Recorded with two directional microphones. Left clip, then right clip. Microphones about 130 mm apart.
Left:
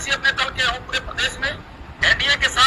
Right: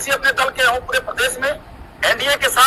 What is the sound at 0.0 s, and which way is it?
A man's voice, 50° right (ahead or behind).